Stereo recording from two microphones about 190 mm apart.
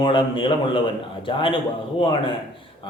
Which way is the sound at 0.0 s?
25° left (ahead or behind).